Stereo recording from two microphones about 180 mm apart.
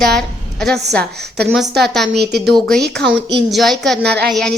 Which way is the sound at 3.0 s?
70° right (ahead or behind).